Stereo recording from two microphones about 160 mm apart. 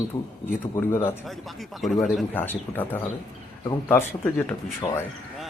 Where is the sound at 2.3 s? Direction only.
10° left (ahead or behind).